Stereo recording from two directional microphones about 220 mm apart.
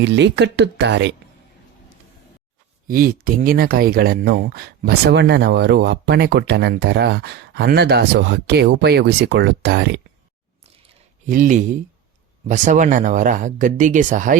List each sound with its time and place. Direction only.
0.0 s speech: 55° right (ahead or behind)
2.8 s speech: 40° right (ahead or behind)
11.3 s speech: 35° right (ahead or behind)